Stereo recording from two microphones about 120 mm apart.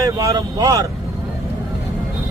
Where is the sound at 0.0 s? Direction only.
30° right (ahead or behind).